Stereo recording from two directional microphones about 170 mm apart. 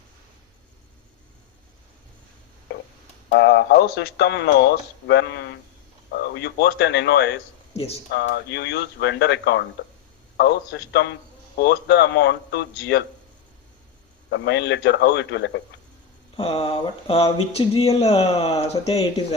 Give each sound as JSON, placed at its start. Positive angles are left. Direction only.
{"t": 3.3, "sound": "speech", "side_deg": 90}
{"t": 6.1, "sound": "speech", "side_deg": 70}
{"t": 7.7, "sound": "speech", "side_deg": 35}
{"t": 8.1, "sound": "a man's voice", "side_deg": 90}
{"t": 14.3, "sound": "speech", "side_deg": 90}
{"t": 16.4, "sound": "speech", "side_deg": 35}